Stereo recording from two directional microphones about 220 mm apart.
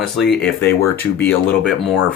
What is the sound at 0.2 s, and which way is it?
Speech, 5° left (ahead or behind).